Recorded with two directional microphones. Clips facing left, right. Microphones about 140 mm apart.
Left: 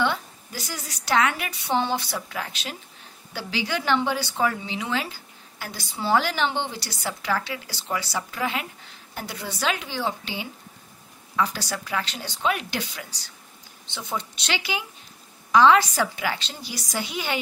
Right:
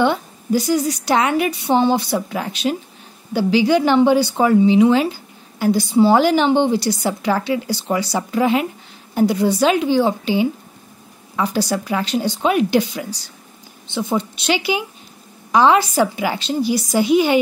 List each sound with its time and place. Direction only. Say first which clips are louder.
0.0 s a woman's voice: right 8 dB; 15° right (ahead or behind)
11.7 s speech: right 10 dB; 25° right (ahead or behind)
14.4 s speech: right 10 dB; 15° right (ahead or behind)